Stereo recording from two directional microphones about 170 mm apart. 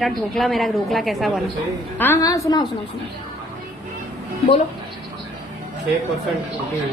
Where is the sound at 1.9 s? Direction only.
15° left (ahead or behind).